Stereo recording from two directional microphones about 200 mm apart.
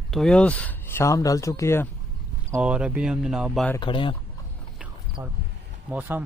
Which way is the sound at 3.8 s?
25° left (ahead or behind).